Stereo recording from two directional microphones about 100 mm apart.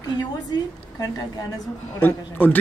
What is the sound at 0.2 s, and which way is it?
A woman's voice, 40° left (ahead or behind).